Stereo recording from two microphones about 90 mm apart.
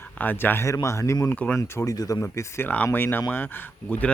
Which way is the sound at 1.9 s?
40° left (ahead or behind).